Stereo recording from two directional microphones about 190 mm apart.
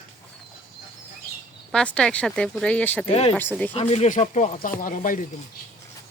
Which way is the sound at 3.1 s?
30° left (ahead or behind).